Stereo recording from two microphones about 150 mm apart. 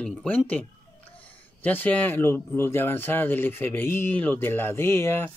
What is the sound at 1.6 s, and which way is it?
Speech, 10° left (ahead or behind).